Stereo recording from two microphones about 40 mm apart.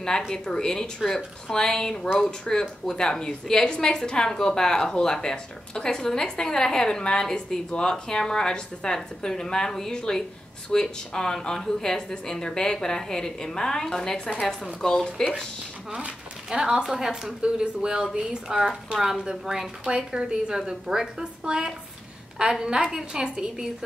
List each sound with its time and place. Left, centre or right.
0.3 s a woman's voice: centre
2.6 s speech: centre
3.0 s a woman's voice: centre
16.4 s a woman's voice: centre